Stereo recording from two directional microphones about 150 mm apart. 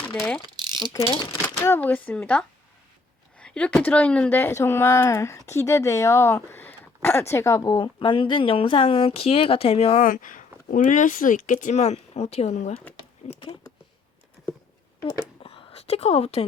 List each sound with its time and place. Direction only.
0.1 s mechanisms: 10° left (ahead or behind)
0.6 s mechanisms: 30° right (ahead or behind)
1.6 s speech: 15° left (ahead or behind); by 10.0 s 45° left (ahead or behind)
10.0 s speech: 60° left (ahead or behind)
15.4 s a sound: 40° left (ahead or behind)